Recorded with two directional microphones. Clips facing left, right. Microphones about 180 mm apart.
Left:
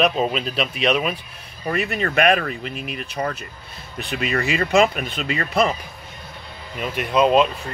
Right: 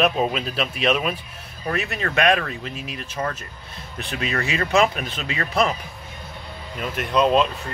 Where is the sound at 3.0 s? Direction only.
Centre (ahead or behind).